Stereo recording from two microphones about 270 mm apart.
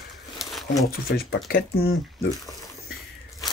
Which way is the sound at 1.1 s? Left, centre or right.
Left.